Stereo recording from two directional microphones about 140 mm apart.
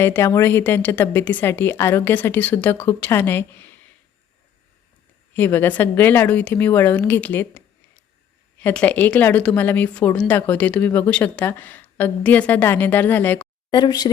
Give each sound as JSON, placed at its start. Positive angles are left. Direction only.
{"t": 0.0, "sound": "a woman's voice", "side_deg": 20}
{"t": 5.3, "sound": "a woman's voice", "side_deg": 15}
{"t": 13.7, "sound": "speech", "side_deg": 30}